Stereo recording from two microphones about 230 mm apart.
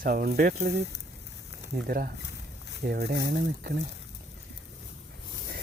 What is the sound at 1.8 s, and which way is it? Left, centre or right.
Speech, right.